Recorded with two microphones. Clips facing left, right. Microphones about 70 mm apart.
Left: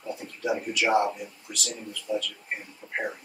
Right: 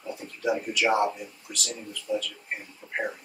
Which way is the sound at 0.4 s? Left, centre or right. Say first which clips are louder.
Right 1 dB; centre.